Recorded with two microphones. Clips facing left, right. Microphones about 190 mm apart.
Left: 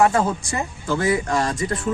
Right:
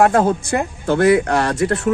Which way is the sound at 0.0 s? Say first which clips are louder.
Right 4 dB; 55° right (ahead or behind).